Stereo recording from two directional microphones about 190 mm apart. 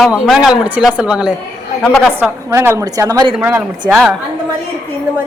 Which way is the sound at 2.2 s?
15° right (ahead or behind).